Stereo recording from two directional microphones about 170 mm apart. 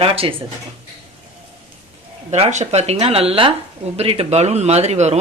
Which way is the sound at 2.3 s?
45° right (ahead or behind).